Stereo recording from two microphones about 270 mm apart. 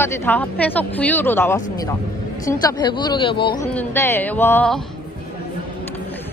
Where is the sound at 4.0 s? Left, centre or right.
Centre.